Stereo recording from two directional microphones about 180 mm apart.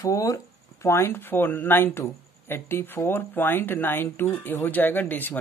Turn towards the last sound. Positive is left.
turn(degrees=10)  # may be behind; listen again after turning